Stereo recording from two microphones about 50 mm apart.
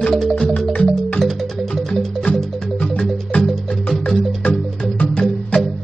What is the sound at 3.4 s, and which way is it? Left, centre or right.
Music, centre.